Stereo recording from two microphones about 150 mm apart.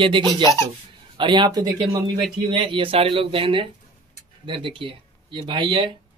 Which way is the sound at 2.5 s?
35° right (ahead or behind).